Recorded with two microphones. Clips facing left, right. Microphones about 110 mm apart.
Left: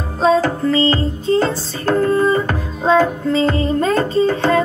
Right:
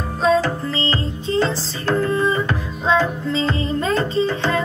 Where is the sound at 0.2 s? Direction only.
40° left (ahead or behind).